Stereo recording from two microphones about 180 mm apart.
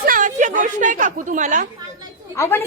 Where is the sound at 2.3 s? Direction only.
15° left (ahead or behind).